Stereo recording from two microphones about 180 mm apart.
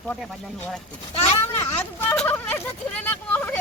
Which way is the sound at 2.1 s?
10° left (ahead or behind).